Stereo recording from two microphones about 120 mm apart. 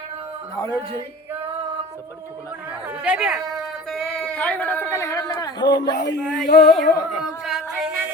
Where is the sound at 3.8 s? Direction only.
5° left (ahead or behind); by 5.9 s 35° left (ahead or behind).